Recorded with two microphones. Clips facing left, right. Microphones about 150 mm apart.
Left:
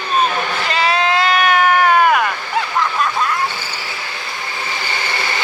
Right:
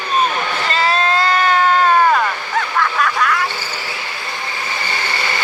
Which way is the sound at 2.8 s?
25° left (ahead or behind).